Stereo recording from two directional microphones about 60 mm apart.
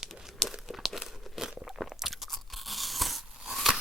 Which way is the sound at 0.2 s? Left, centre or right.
Centre.